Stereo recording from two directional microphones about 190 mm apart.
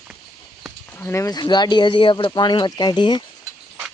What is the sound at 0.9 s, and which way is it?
Speech, 15° left (ahead or behind).